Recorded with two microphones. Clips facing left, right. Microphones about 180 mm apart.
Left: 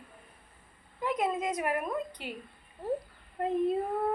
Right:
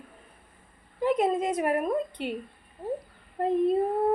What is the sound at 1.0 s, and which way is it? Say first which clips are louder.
Speech: right 6 dB; 25° right (ahead or behind).